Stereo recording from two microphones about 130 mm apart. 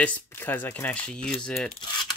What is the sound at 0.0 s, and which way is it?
Speech, 15° left (ahead or behind).